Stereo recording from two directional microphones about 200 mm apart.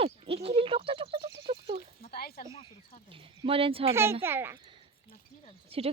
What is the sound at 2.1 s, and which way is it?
Speech, 50° left (ahead or behind).